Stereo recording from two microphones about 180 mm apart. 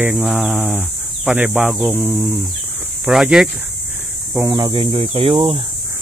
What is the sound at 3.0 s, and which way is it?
Insect, 5° right (ahead or behind).